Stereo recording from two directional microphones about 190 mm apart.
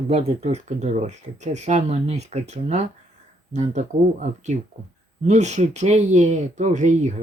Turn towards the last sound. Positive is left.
turn(degrees=-40)  # may be behind; listen again after turning